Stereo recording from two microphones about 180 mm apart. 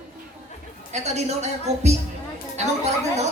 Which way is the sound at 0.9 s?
40° right (ahead or behind).